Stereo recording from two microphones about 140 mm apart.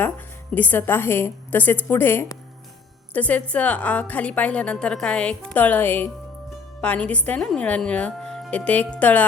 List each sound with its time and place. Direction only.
0.5 s a woman's voice: 15° left (ahead or behind)